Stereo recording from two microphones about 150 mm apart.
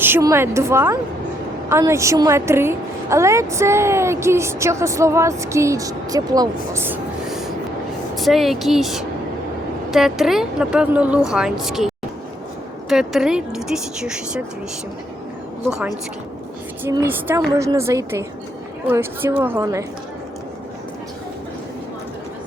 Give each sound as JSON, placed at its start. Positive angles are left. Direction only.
{"t": 0.0, "sound": "a woman's voice", "side_deg": -20}
{"t": 7.3, "sound": "a sound", "side_deg": 0}
{"t": 8.1, "sound": "a woman's voice", "side_deg": 0}
{"t": 12.9, "sound": "a woman's voice", "side_deg": 0}
{"t": 16.9, "sound": "a woman's voice", "side_deg": -15}